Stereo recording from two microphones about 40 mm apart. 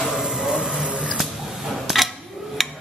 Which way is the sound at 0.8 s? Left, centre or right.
Right.